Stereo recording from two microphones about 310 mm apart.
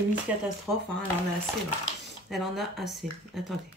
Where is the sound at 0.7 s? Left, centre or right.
Centre.